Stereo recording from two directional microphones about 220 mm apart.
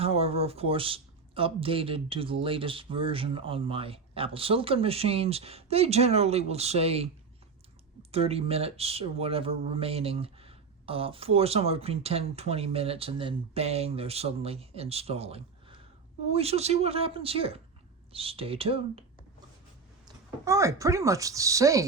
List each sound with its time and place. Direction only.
0.0 s speech: 25° right (ahead or behind)
8.1 s speech: 25° right (ahead or behind)
20.1 s speech: 15° right (ahead or behind)